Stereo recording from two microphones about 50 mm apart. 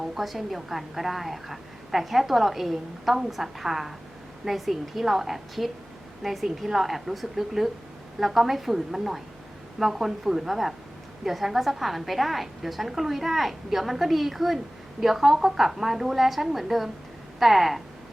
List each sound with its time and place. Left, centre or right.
0.0 s a woman's voice: centre